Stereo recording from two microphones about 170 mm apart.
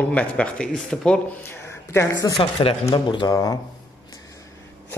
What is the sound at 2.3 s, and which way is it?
Speech, 35° left (ahead or behind).